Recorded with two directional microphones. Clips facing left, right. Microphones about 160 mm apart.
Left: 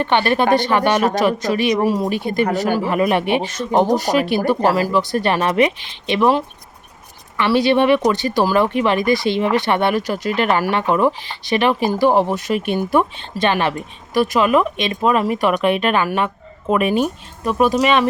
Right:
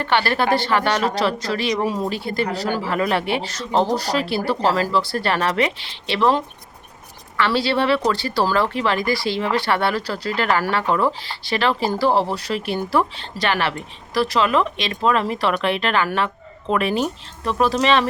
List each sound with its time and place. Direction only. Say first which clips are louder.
0.0 s a woman's voice: left 3 dB; 20° left (ahead or behind)